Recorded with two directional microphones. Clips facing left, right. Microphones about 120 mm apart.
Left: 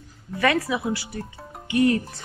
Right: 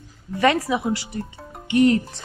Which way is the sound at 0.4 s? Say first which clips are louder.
Right 3 dB; 20° right (ahead or behind).